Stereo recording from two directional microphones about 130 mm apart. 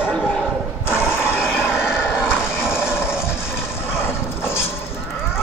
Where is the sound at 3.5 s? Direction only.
20° left (ahead or behind).